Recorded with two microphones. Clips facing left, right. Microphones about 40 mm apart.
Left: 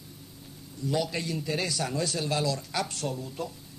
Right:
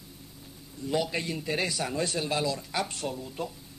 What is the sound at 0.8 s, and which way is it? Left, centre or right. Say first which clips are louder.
A man's voice: even; centre.